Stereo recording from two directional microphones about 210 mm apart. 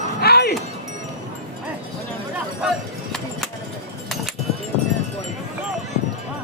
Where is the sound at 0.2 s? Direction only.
50° left (ahead or behind).